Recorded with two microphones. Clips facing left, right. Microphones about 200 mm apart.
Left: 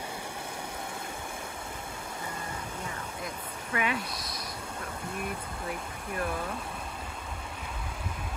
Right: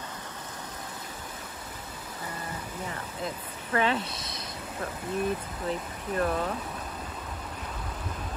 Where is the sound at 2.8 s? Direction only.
10° left (ahead or behind).